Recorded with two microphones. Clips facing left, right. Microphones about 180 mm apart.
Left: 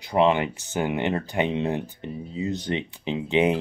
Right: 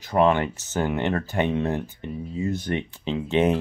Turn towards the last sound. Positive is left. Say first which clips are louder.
# even
turn(degrees=15)  # may be behind; listen again after turning